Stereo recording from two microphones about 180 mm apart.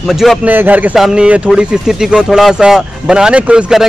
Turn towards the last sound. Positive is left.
turn(degrees=-5)  # may be behind; listen again after turning